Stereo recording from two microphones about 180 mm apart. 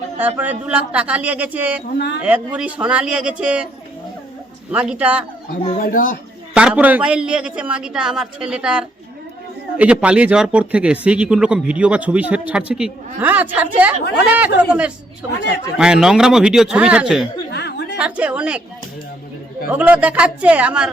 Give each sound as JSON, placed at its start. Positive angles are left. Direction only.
{"t": 0.2, "sound": "speech", "side_deg": -10}
{"t": 4.7, "sound": "speech", "side_deg": -10}
{"t": 5.8, "sound": "speech", "side_deg": 50}
{"t": 6.5, "sound": "a man's voice", "side_deg": -5}
{"t": 15.4, "sound": "speech", "side_deg": 65}
{"t": 15.8, "sound": "a man's voice", "side_deg": -5}
{"t": 17.5, "sound": "a sound", "side_deg": 65}
{"t": 17.9, "sound": "speech", "side_deg": -5}
{"t": 19.7, "sound": "speech", "side_deg": -10}